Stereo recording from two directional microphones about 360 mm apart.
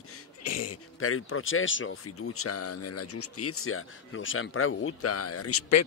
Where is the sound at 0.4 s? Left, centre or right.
Left.